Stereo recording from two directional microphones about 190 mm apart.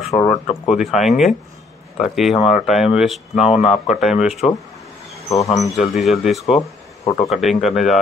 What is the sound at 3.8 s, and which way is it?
Speech, centre (ahead or behind).